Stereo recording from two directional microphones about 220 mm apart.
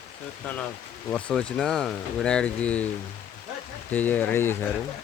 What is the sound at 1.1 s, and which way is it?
Speech, 5° left (ahead or behind).